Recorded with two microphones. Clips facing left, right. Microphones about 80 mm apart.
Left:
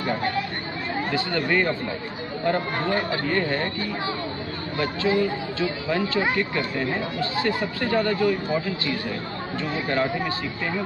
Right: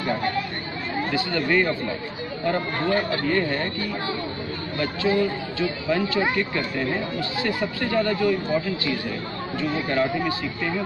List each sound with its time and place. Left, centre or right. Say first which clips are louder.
1.1 s speech: right 1 dB; left
5.0 s speech: right 1 dB; left